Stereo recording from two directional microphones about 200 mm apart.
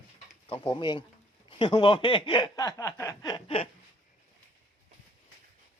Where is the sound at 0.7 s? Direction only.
25° left (ahead or behind).